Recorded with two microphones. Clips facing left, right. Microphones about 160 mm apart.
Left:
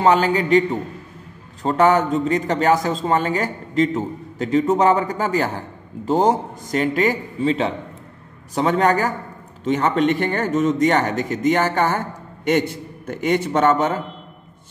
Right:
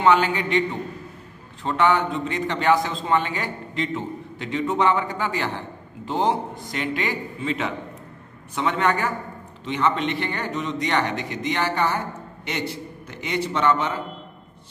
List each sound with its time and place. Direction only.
0.0 s a man's voice: 40° left (ahead or behind)